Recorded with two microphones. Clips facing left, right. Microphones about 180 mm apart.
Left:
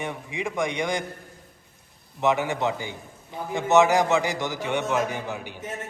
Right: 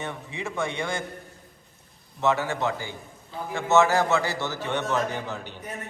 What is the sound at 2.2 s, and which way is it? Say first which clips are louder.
A man's voice: left 1 dB; 15° left (ahead or behind).